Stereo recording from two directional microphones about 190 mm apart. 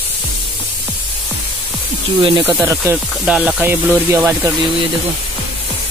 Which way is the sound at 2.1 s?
25° right (ahead or behind).